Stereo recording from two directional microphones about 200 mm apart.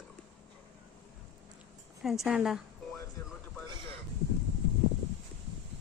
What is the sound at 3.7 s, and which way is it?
Speech, 25° right (ahead or behind).